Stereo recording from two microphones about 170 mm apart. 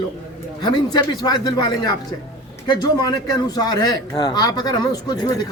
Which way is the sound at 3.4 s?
25° left (ahead or behind).